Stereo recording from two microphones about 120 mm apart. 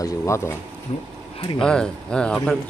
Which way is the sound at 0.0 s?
25° left (ahead or behind).